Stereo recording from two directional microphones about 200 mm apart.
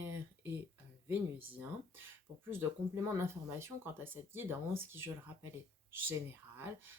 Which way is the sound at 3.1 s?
10° right (ahead or behind).